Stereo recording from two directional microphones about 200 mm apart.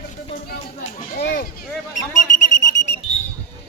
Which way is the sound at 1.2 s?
50° left (ahead or behind).